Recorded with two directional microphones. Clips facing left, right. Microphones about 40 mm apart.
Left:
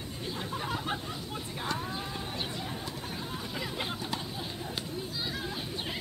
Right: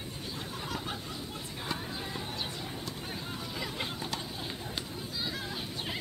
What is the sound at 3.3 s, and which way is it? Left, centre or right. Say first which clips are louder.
Hubbub: left 1 dB; centre.